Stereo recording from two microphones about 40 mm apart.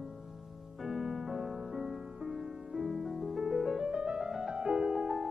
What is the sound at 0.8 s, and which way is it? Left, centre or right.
Music, centre.